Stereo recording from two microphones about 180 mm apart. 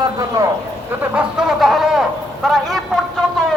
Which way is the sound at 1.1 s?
5° right (ahead or behind).